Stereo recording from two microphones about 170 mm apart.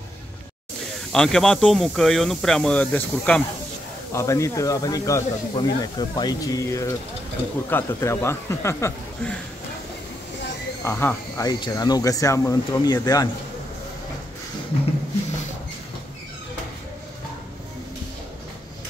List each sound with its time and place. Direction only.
1.1 s speech: 5° left (ahead or behind)
10.8 s speech: 15° left (ahead or behind)